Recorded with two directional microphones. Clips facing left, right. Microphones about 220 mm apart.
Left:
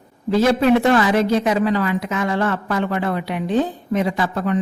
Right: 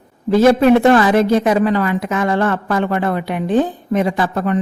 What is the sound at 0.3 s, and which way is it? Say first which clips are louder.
Speech: right 5 dB; 50° right (ahead or behind).